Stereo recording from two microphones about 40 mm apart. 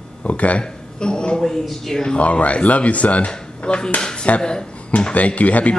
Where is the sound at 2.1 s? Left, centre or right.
Left.